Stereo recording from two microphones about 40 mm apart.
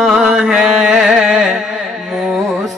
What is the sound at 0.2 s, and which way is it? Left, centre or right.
Music, centre.